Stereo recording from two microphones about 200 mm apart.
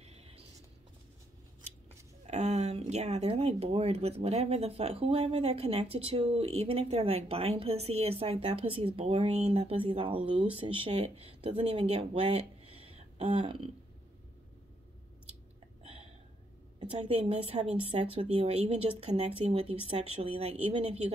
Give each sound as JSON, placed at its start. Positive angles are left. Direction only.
{"t": 0.0, "sound": "a sound", "side_deg": -30}
{"t": 2.2, "sound": "speech", "side_deg": -35}
{"t": 15.8, "sound": "hiccup", "side_deg": -30}
{"t": 17.0, "sound": "speech", "side_deg": -30}